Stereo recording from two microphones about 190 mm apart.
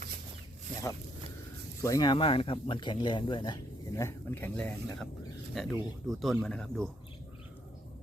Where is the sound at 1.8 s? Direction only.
20° left (ahead or behind); by 6.8 s centre (ahead or behind).